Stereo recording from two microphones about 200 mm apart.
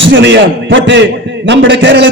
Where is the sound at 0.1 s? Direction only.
70° right (ahead or behind).